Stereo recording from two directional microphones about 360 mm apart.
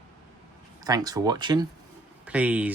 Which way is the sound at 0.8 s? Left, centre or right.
Centre.